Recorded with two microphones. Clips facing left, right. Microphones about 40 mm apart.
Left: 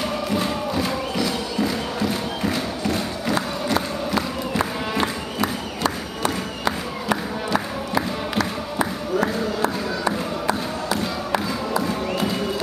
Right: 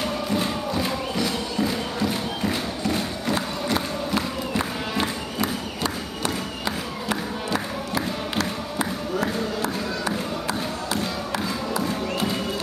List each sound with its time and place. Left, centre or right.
0.0 s music: centre
4.6 s crowd: centre
7.1 s music: centre
9.6 s a sound: left